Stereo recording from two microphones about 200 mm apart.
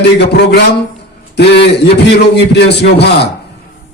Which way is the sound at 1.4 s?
55° left (ahead or behind).